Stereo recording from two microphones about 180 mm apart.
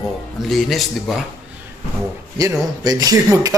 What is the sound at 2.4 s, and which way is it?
Speech, 20° right (ahead or behind).